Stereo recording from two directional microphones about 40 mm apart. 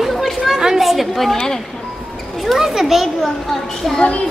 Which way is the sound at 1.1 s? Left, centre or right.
Centre.